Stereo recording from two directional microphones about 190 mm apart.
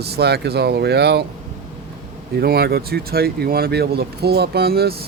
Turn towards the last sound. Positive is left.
turn(degrees=-55)  # may be behind; listen again after turning